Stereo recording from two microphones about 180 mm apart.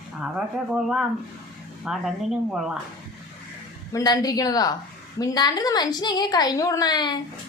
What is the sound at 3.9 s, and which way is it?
A woman's voice, 20° left (ahead or behind).